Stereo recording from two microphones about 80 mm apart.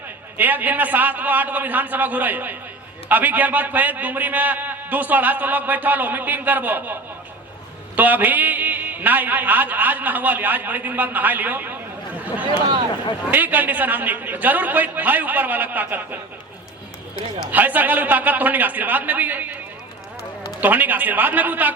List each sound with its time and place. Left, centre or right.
0.3 s a man's voice: right
7.9 s a man's voice: right
17.5 s a man's voice: right
20.6 s a man's voice: right